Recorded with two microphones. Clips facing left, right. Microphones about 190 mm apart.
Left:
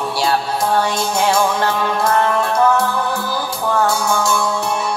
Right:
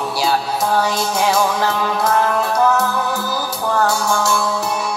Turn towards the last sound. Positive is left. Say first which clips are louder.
# left 1 dB
turn(degrees=0)  # may be behind; listen again after turning